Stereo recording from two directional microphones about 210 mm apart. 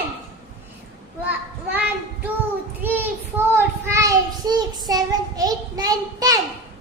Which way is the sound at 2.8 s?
10° right (ahead or behind).